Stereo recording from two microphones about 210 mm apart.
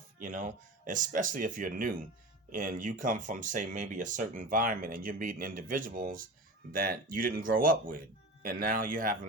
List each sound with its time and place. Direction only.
0.2 s speech: 40° right (ahead or behind)